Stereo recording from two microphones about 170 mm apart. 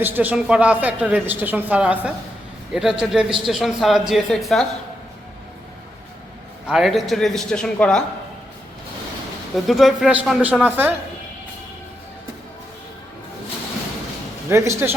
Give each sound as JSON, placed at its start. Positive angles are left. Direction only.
{"t": 0.0, "sound": "a woman's voice", "side_deg": -10}
{"t": 6.7, "sound": "a man's voice", "side_deg": 0}
{"t": 9.6, "sound": "a woman's voice", "side_deg": 0}
{"t": 14.5, "sound": "a woman's voice", "side_deg": -15}